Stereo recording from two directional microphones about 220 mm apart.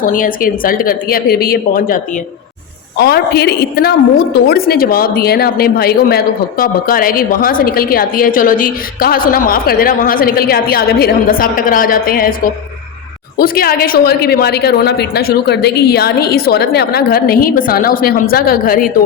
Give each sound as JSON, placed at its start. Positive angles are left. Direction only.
{"t": 0.0, "sound": "a woman's voice", "side_deg": 40}
{"t": 3.0, "sound": "a woman's voice", "side_deg": 45}
{"t": 13.4, "sound": "a woman's voice", "side_deg": 45}